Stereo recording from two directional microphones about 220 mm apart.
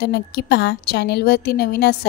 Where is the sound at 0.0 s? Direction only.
45° left (ahead or behind).